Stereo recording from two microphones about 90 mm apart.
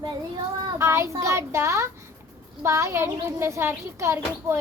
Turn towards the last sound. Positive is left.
turn(degrees=-30)  # may be behind; listen again after turning